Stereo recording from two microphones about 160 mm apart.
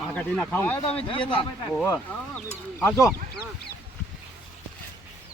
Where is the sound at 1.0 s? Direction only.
30° left (ahead or behind).